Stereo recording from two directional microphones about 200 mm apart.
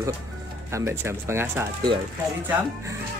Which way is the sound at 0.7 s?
15° right (ahead or behind).